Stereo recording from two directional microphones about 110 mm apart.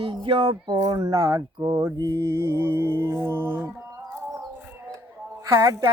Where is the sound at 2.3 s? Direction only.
20° right (ahead or behind).